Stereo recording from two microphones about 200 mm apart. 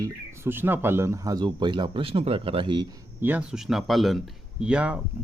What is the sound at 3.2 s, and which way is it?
Speech, 5° right (ahead or behind).